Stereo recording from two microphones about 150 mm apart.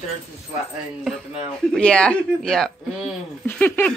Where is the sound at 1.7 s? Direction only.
5° left (ahead or behind).